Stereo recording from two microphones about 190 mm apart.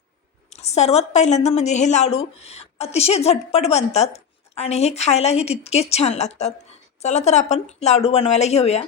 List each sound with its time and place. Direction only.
0.5 s a woman's voice: 35° left (ahead or behind)